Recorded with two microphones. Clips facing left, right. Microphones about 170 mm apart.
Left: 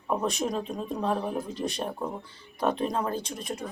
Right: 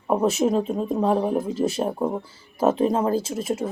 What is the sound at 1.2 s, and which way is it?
A woman's voice, 35° right (ahead or behind).